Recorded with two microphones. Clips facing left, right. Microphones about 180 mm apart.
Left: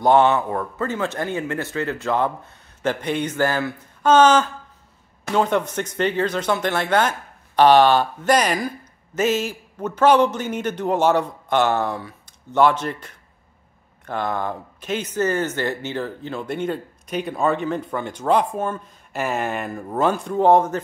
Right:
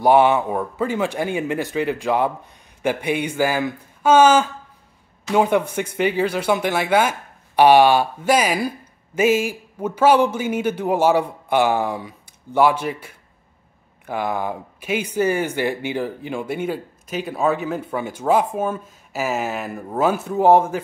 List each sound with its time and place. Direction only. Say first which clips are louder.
0.0 s speech: right 1 dB; 10° right (ahead or behind)